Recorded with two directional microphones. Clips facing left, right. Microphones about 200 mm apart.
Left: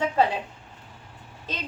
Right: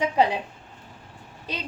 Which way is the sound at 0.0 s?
15° right (ahead or behind).